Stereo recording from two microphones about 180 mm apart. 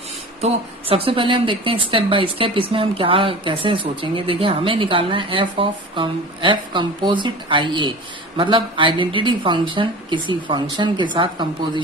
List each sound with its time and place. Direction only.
0.4 s speech: 30° right (ahead or behind)